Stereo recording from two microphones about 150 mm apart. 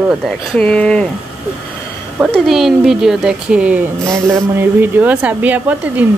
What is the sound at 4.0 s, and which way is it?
Speech, 20° right (ahead or behind).